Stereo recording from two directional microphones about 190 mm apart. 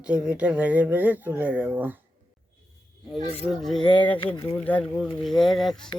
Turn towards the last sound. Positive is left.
turn(degrees=0)  # may be behind; listen again after turning